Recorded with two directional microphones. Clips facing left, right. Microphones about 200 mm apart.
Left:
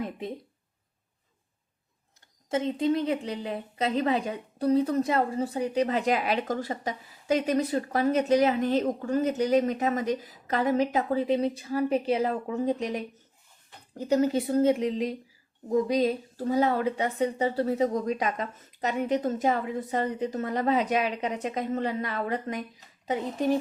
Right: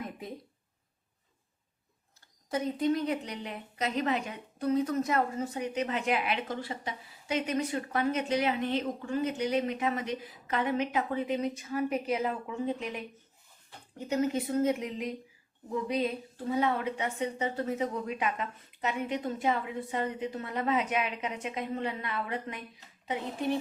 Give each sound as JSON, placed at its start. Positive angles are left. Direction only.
{"t": 0.0, "sound": "speech", "side_deg": 25}
{"t": 2.5, "sound": "a woman's voice", "side_deg": 25}